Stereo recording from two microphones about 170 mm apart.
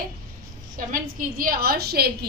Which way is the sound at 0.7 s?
55° right (ahead or behind).